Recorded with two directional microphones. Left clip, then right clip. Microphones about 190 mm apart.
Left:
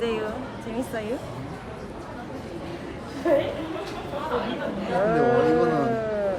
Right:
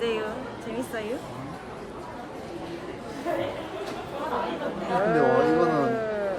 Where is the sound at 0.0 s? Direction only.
Centre (ahead or behind).